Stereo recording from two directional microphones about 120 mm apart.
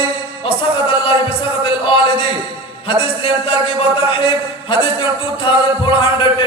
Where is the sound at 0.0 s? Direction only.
45° left (ahead or behind).